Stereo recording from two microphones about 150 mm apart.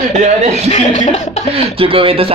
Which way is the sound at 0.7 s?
50° left (ahead or behind).